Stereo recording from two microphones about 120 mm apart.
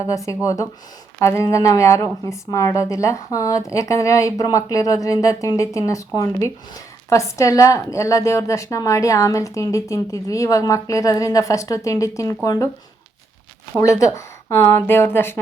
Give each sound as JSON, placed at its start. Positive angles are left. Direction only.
{"t": 0.0, "sound": "a woman's voice", "side_deg": 25}
{"t": 13.7, "sound": "a woman's voice", "side_deg": 25}